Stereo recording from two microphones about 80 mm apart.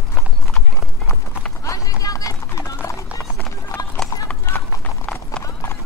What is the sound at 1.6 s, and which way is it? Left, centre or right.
Clip-clop, left.